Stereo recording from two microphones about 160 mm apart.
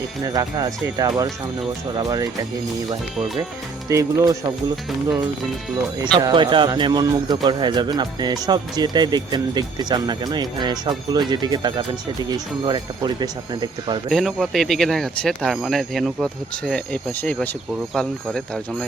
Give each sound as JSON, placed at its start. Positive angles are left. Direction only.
{"t": 0.3, "sound": "speech", "side_deg": -25}
{"t": 3.8, "sound": "speech", "side_deg": -20}
{"t": 6.1, "sound": "speech", "side_deg": -30}
{"t": 14.1, "sound": "speech", "side_deg": 0}